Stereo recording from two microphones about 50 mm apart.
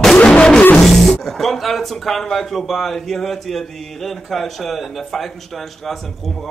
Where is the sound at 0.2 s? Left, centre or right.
Centre.